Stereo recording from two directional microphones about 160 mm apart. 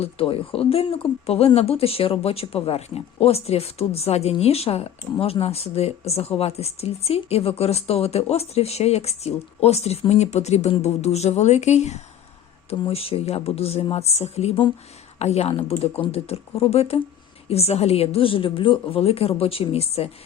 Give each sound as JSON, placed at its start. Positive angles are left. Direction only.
{"t": 0.0, "sound": "speech", "side_deg": 35}